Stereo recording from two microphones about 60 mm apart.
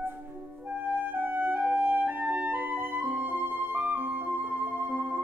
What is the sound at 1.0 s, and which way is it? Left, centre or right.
Music, right.